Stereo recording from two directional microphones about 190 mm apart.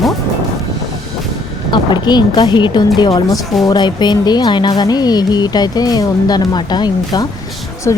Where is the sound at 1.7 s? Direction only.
25° left (ahead or behind).